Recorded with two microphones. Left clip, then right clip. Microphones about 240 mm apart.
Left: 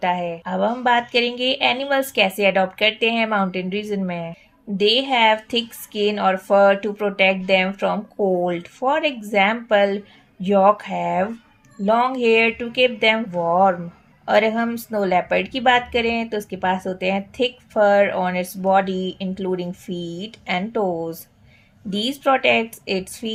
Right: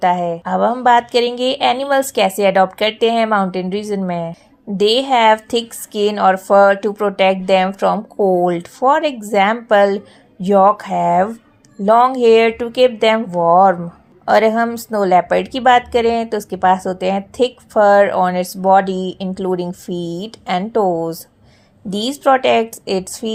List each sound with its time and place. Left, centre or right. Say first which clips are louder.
0.0 s a woman's voice: right 6 dB; right